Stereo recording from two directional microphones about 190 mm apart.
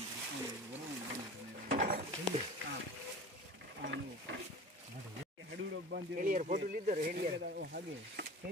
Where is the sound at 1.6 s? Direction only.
45° right (ahead or behind).